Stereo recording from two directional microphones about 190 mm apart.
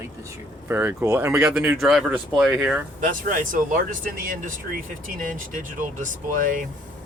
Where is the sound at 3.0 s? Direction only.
45° right (ahead or behind).